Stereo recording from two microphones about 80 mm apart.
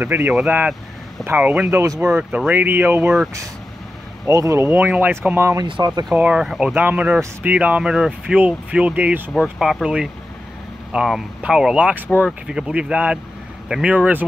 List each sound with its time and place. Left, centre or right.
0.0 s speech: right
4.3 s speech: right
4.6 s speech: right
5.8 s speech: right
6.1 s speech: centre
6.4 s speech: centre
6.7 s speech: right
7.9 s speech: centre
9.4 s speech: centre